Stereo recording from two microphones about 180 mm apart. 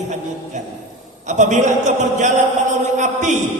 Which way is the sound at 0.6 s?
40° right (ahead or behind).